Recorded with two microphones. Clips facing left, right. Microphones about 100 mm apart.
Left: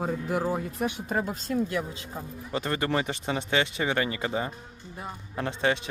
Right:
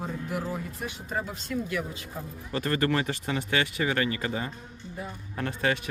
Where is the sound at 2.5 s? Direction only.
20° left (ahead or behind).